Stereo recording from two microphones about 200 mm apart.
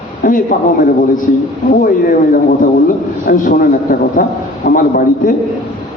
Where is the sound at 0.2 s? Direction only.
45° left (ahead or behind).